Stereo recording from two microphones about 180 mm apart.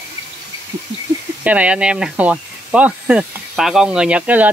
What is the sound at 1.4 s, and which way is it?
Speech, 10° right (ahead or behind).